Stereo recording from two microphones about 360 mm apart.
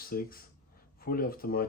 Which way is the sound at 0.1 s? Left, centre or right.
Left.